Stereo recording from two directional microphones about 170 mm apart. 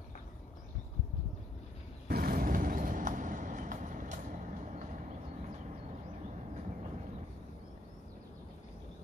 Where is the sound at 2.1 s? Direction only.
60° right (ahead or behind).